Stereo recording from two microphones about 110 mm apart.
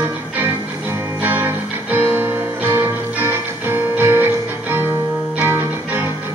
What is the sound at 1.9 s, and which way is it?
Music, 15° right (ahead or behind).